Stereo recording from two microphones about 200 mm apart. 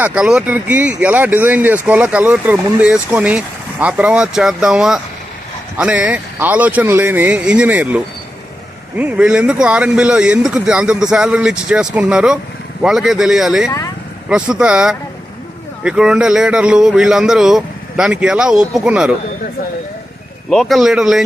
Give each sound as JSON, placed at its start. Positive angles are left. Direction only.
{"t": 0.0, "sound": "speech", "side_deg": -5}
{"t": 13.7, "sound": "speech", "side_deg": 15}
{"t": 14.3, "sound": "speech", "side_deg": -5}
{"t": 20.5, "sound": "speech", "side_deg": 0}